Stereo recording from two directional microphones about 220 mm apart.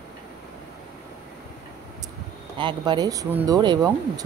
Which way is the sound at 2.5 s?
20° right (ahead or behind).